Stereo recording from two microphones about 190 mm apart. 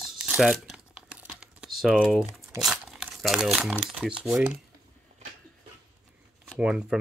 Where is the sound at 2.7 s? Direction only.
Centre (ahead or behind).